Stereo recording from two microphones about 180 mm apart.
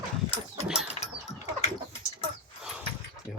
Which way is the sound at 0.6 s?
5° right (ahead or behind).